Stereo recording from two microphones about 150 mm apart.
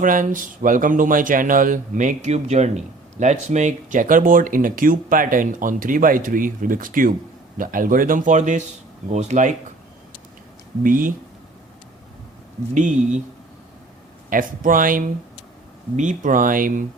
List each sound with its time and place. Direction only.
0.0 s speech: 65° right (ahead or behind)
10.8 s speech: 65° right (ahead or behind)
12.7 s speech: 55° right (ahead or behind)
14.3 s speech: 65° right (ahead or behind)